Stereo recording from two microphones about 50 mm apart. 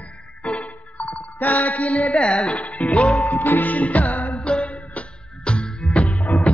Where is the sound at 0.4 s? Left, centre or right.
Left.